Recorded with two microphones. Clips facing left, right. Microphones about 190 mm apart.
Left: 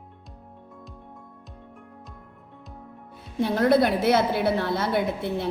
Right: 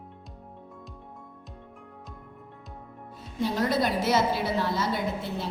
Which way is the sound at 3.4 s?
60° left (ahead or behind).